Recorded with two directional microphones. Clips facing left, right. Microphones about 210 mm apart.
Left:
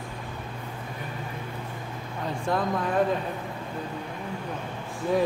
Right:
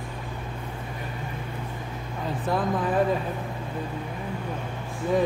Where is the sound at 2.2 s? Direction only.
5° right (ahead or behind).